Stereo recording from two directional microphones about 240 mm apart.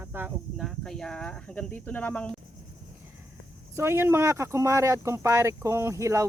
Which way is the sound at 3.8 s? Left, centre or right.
Centre.